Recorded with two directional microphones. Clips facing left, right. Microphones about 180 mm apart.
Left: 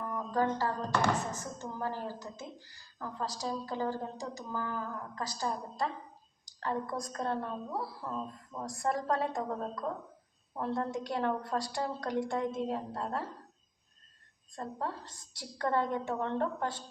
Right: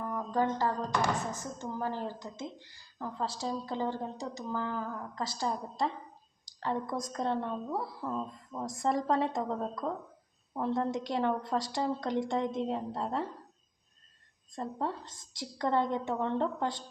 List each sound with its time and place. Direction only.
0.1 s speech: 20° right (ahead or behind)
6.6 s speech: 20° right (ahead or behind)
14.5 s speech: 20° right (ahead or behind)